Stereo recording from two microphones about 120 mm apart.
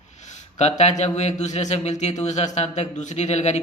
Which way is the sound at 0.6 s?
70° left (ahead or behind).